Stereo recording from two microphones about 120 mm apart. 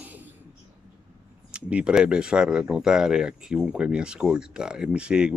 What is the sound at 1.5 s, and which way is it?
Speech, 10° right (ahead or behind).